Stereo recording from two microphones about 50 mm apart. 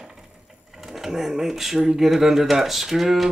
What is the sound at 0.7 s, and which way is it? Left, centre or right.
Speech, centre.